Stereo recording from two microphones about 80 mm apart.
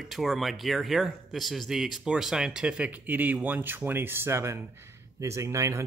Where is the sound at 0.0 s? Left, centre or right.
Centre.